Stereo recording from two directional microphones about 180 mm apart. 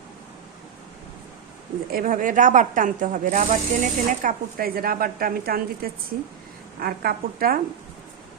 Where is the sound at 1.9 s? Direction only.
50° right (ahead or behind).